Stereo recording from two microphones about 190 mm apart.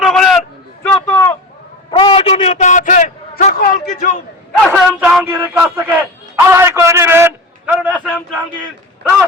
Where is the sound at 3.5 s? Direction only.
50° left (ahead or behind).